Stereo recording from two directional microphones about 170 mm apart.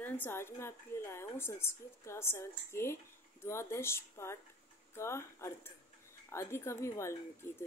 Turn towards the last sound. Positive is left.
turn(degrees=15)  # may be behind; listen again after turning